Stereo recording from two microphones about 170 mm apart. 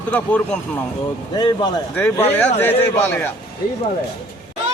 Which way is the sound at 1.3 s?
25° left (ahead or behind).